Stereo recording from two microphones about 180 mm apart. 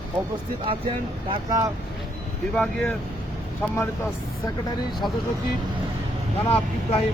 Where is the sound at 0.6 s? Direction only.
30° right (ahead or behind).